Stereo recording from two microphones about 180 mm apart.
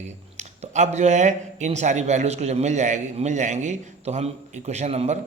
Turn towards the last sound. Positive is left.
turn(degrees=-35)  # may be behind; listen again after turning